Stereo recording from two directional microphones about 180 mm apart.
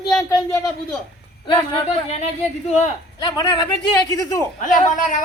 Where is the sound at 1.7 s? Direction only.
35° left (ahead or behind).